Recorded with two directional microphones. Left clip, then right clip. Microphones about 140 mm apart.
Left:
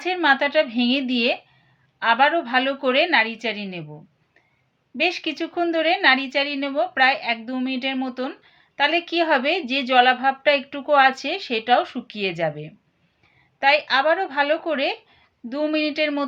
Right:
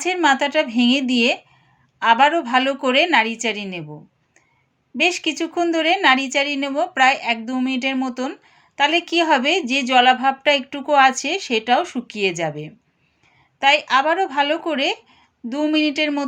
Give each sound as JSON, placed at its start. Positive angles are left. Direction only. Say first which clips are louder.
{"t": 0.0, "sound": "speech", "louder": "right 2 dB", "side_deg": -35}
{"t": 4.9, "sound": "a woman's voice", "louder": "right 4 dB", "side_deg": -35}